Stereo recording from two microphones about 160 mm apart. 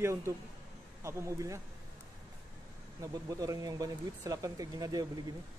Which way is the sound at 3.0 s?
20° right (ahead or behind).